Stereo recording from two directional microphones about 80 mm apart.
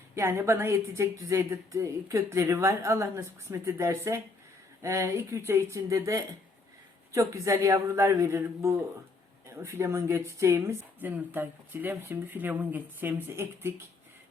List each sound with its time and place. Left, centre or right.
0.2 s a woman's voice: right
11.0 s speech: right